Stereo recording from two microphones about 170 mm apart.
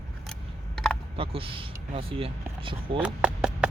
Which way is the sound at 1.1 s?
30° right (ahead or behind).